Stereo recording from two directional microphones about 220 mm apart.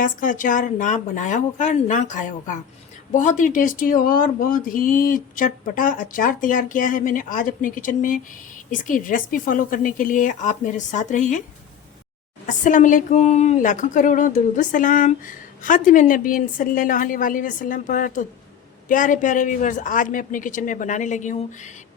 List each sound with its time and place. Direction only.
0.0 s speech: 35° left (ahead or behind)
12.5 s speech: 35° left (ahead or behind)